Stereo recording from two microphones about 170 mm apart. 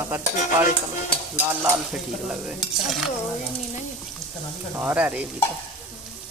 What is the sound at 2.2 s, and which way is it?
Speech, 5° right (ahead or behind).